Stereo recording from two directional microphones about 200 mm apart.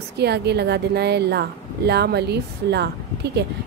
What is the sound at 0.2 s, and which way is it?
A woman's voice, 55° right (ahead or behind).